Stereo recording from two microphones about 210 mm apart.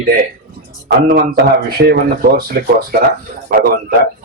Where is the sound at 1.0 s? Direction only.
45° right (ahead or behind).